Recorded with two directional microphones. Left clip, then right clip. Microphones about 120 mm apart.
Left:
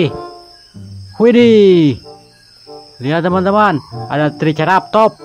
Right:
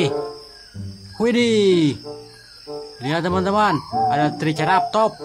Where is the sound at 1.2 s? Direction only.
40° left (ahead or behind).